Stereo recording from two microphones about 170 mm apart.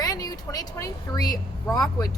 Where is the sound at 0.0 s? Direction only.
20° left (ahead or behind).